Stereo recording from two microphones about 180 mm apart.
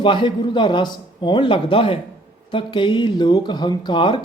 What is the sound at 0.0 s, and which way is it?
Speech, 30° left (ahead or behind).